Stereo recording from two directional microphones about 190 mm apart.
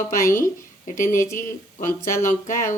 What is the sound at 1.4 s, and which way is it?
A woman's voice, 45° left (ahead or behind).